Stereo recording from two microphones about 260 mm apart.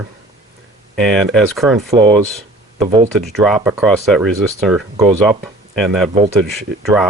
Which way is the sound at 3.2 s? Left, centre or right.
Centre.